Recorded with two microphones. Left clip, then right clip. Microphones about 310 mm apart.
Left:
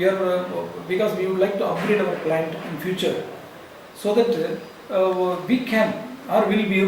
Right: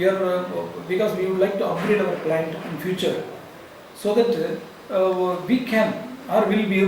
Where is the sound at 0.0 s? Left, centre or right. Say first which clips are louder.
Even; centre.